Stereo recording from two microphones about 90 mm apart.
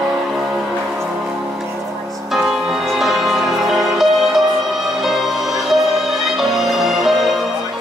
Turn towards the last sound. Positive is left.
turn(degrees=0)  # may be behind; listen again after turning